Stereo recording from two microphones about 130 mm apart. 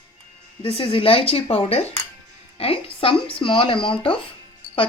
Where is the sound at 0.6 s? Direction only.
45° left (ahead or behind).